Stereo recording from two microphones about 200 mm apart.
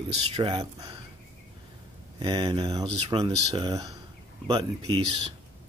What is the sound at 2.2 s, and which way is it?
Speech, 25° right (ahead or behind).